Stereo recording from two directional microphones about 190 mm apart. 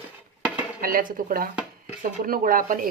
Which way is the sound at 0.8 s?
50° right (ahead or behind).